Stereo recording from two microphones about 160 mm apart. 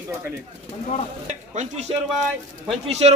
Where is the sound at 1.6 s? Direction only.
45° right (ahead or behind).